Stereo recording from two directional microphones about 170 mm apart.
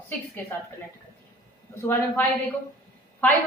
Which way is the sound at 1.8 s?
15° left (ahead or behind).